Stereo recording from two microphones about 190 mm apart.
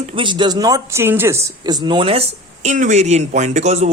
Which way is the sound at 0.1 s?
25° right (ahead or behind).